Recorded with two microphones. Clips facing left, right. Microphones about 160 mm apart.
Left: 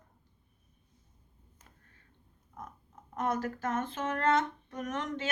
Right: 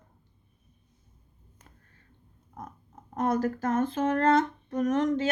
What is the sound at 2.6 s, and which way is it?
Speech, 35° right (ahead or behind).